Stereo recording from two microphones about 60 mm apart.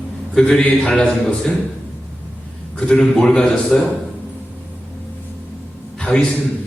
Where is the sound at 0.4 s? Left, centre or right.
Centre.